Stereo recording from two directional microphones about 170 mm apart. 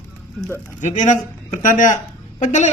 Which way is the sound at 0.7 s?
45° left (ahead or behind).